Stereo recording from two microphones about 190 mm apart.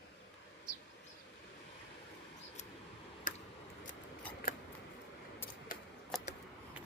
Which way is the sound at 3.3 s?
45° left (ahead or behind).